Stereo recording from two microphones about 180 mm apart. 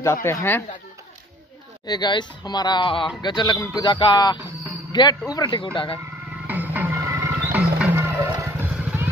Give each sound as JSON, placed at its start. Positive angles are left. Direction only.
{"t": 0.0, "sound": "speech", "side_deg": 15}
{"t": 1.9, "sound": "speech", "side_deg": 25}
{"t": 6.4, "sound": "music", "side_deg": -10}
{"t": 7.8, "sound": "vehicle", "side_deg": -10}